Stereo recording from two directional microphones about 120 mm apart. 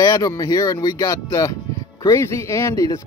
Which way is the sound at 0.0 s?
30° left (ahead or behind).